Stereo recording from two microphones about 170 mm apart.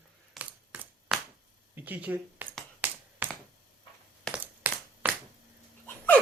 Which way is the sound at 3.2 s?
10° right (ahead or behind).